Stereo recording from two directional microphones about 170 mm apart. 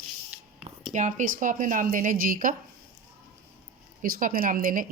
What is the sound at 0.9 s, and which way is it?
A woman's voice, 45° right (ahead or behind).